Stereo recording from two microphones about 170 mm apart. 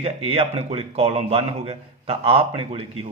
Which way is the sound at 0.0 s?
35° right (ahead or behind).